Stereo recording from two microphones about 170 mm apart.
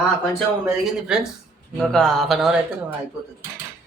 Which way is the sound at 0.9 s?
5° right (ahead or behind).